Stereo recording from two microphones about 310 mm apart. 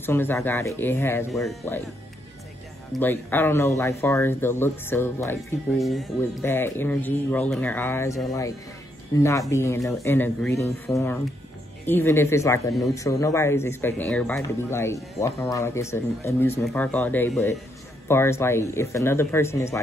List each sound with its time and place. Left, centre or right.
0.0 s speech: centre
2.9 s speech: centre